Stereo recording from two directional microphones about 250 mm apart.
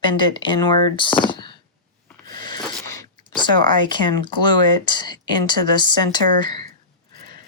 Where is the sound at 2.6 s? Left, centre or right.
Centre.